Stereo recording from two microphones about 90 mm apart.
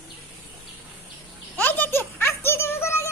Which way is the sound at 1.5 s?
20° left (ahead or behind).